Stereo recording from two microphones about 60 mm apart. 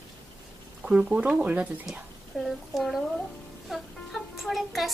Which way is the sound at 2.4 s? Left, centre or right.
Centre.